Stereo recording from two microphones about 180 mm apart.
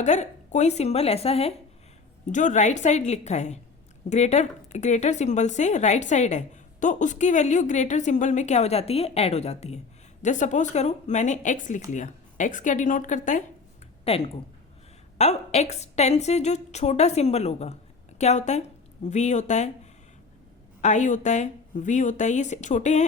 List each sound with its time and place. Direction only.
0.0 s a woman's voice: 40° left (ahead or behind)
14.0 s speech: 35° left (ahead or behind)